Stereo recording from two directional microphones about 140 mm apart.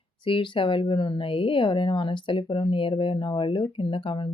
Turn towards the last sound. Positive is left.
turn(degrees=35)  # may be behind; listen again after turning